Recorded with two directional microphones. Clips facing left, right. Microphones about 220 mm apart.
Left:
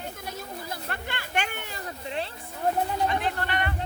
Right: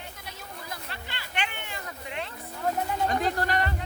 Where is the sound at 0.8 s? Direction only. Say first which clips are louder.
Left 6 dB; 50° left (ahead or behind); by 2.3 s 30° left (ahead or behind).